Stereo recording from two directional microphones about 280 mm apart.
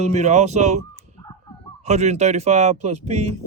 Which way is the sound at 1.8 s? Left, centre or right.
Right.